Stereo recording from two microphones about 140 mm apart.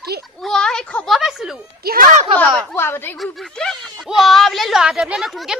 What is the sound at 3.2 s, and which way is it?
Speech, centre (ahead or behind).